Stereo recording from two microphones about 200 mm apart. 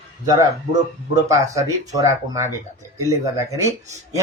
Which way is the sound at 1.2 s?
15° right (ahead or behind).